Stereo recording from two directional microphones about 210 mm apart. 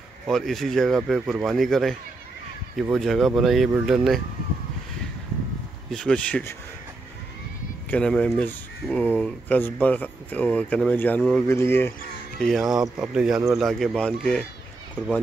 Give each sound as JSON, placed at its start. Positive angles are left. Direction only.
{"t": 0.3, "sound": "speech", "side_deg": 0}
{"t": 5.9, "sound": "speech", "side_deg": 5}
{"t": 7.9, "sound": "speech", "side_deg": 5}